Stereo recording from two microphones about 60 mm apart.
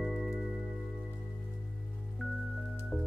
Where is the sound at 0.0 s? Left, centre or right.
Centre.